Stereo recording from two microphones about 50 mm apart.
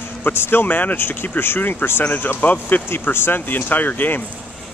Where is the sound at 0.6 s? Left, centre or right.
Left.